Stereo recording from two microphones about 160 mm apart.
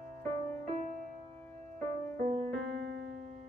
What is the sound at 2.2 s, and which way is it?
Music, 45° right (ahead or behind).